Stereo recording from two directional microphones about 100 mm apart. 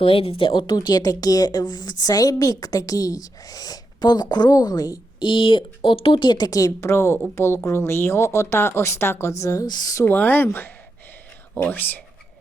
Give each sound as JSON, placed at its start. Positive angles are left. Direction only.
{"t": 0.0, "sound": "speech", "side_deg": 70}
{"t": 5.3, "sound": "speech", "side_deg": 55}
{"t": 6.8, "sound": "speech", "side_deg": 25}
{"t": 9.6, "sound": "speech", "side_deg": 40}
{"t": 10.1, "sound": "speech", "side_deg": 20}